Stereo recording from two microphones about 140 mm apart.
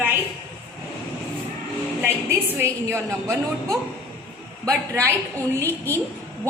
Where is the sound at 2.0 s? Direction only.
20° right (ahead or behind).